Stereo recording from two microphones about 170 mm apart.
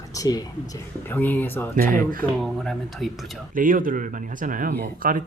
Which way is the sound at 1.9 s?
55° right (ahead or behind).